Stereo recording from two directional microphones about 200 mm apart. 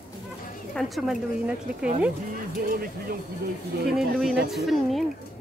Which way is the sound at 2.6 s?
45° right (ahead or behind).